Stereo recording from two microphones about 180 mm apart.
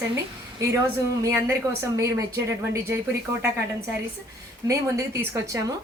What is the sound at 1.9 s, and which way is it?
Speech, 15° right (ahead or behind).